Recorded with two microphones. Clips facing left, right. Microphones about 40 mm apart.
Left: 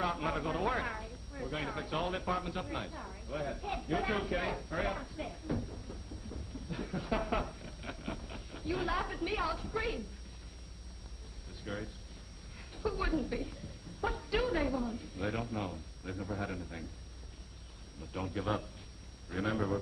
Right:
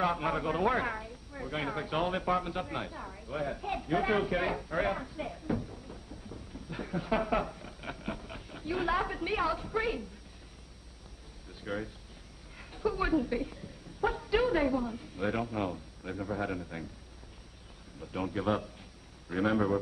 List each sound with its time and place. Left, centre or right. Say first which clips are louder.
0.0 s speech: right 4 dB; centre
11.6 s speech: right 4 dB; centre
18.0 s a man's voice: right 4 dB; centre